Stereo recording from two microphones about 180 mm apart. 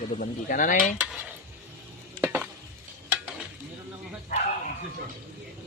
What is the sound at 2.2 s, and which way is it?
Stir, 10° right (ahead or behind).